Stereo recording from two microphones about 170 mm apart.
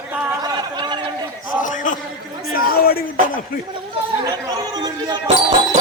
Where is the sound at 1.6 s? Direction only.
50° left (ahead or behind).